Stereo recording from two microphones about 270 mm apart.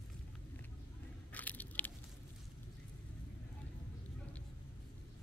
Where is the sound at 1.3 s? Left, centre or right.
Centre.